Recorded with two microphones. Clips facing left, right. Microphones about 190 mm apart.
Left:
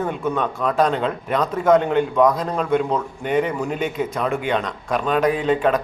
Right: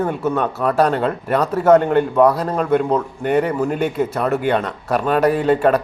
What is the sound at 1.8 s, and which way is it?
Speech, 50° right (ahead or behind).